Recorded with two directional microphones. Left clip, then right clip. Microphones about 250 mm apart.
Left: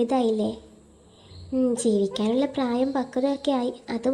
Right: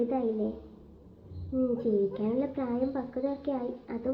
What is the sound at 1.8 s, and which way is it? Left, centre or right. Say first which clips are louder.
A woman's voice: left 5 dB; left.